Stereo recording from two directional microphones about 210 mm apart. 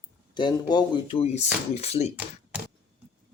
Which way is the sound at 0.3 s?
20° left (ahead or behind).